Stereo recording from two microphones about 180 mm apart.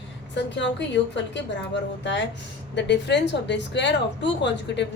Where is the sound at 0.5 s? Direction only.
75° left (ahead or behind).